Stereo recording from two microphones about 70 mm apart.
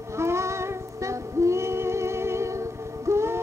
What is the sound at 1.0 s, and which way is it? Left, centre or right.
Female singing, right.